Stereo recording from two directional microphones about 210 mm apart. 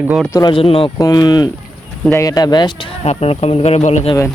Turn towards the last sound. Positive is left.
turn(degrees=30)  # may be behind; listen again after turning